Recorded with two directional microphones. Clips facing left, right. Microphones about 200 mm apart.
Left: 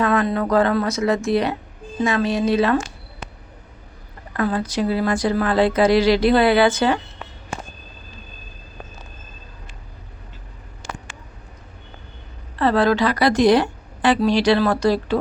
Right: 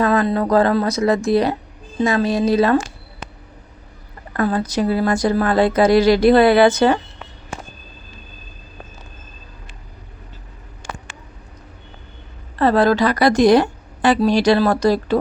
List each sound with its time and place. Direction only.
0.0 s speech: 35° right (ahead or behind)
4.4 s speech: 40° right (ahead or behind)
12.5 s speech: 40° right (ahead or behind)